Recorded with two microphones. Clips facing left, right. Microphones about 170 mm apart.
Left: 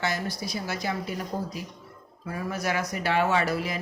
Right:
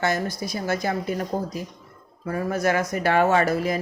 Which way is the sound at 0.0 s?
50° right (ahead or behind).